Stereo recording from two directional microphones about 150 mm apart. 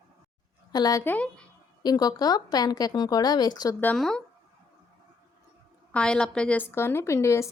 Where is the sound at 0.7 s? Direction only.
25° left (ahead or behind).